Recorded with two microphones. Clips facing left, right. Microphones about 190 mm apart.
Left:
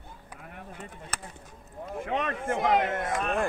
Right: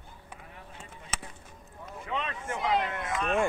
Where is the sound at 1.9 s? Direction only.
50° left (ahead or behind).